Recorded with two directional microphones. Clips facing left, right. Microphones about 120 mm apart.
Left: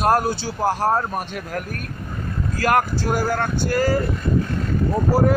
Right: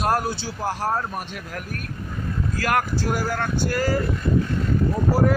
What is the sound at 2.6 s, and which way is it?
Speech, 35° left (ahead or behind).